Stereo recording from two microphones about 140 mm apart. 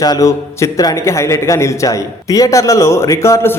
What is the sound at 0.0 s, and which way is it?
A man's voice, 25° left (ahead or behind).